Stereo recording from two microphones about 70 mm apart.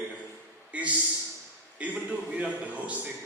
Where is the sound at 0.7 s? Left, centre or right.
Right.